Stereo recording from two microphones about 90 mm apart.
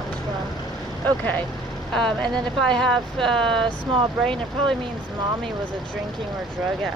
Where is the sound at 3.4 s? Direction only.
70° right (ahead or behind).